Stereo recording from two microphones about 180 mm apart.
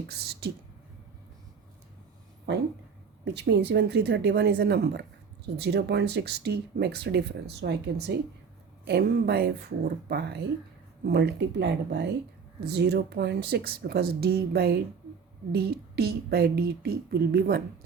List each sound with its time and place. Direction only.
0.1 s speech: 60° right (ahead or behind)
3.2 s speech: 70° right (ahead or behind)